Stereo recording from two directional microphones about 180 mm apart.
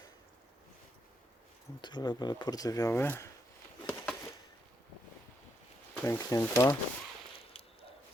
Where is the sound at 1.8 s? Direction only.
25° left (ahead or behind).